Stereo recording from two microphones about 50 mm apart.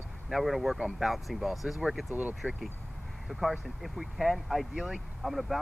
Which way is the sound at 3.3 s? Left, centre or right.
Centre.